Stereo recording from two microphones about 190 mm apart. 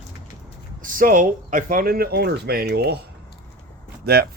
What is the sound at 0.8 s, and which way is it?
Speech, 45° right (ahead or behind).